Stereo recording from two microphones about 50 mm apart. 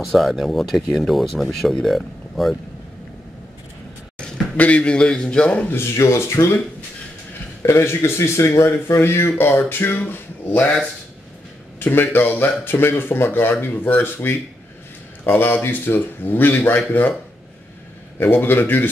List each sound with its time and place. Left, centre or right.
0.0 s speech: centre
4.6 s a man's voice: left
5.9 s speech: left
7.6 s a man's voice: left
11.8 s speech: left
18.2 s speech: left